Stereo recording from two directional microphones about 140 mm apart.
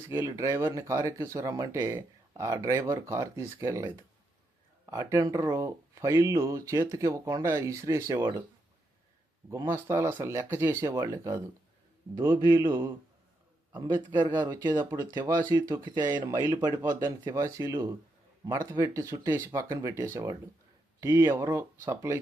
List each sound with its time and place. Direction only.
0.1 s speech: 20° right (ahead or behind)
9.5 s speech: 20° right (ahead or behind)
13.9 s speech: 30° right (ahead or behind)